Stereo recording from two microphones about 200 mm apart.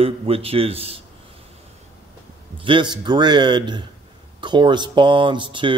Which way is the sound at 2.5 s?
25° right (ahead or behind).